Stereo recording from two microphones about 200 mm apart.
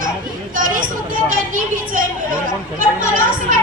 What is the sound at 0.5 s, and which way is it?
Hubbub, 40° right (ahead or behind).